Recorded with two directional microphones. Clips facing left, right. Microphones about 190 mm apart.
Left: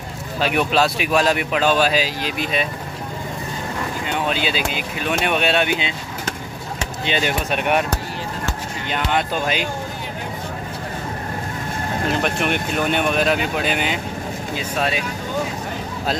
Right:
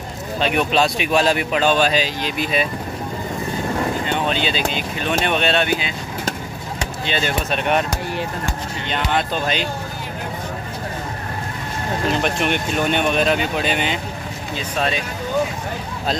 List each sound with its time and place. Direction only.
0.4 s speech: 5° left (ahead or behind)
4.0 s speech: 5° left (ahead or behind)
7.1 s speech: 15° left (ahead or behind)
8.8 s speech: 10° left (ahead or behind)
12.1 s speech: 5° left (ahead or behind)